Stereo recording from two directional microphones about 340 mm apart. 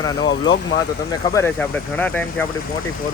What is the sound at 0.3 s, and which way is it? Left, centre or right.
Speech, left.